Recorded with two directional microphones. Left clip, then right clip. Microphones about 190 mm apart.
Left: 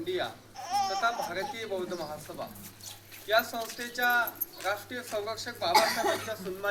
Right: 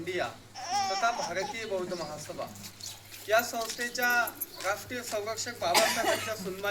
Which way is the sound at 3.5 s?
10° right (ahead or behind).